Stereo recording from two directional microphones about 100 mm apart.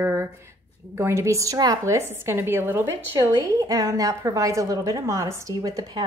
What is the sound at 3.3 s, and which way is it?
A woman's voice, 35° right (ahead or behind).